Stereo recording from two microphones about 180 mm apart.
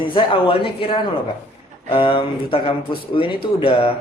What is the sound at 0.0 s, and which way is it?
Speech, 30° left (ahead or behind).